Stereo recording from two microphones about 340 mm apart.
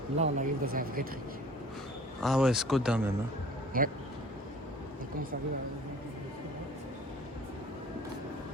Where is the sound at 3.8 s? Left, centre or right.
Right.